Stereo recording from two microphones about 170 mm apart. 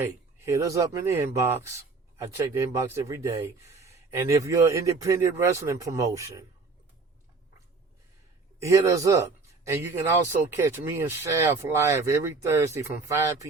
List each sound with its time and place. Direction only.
0.0 s speech: 20° right (ahead or behind)
8.5 s speech: 20° right (ahead or behind)